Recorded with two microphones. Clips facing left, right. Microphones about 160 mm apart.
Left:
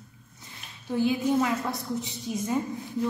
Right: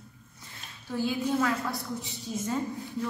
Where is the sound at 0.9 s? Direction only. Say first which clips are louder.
Left 4 dB; 20° left (ahead or behind).